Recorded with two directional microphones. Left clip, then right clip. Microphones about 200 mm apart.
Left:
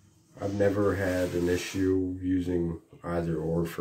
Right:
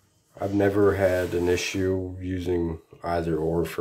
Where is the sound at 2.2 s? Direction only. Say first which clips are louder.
Right 2 dB; 55° right (ahead or behind).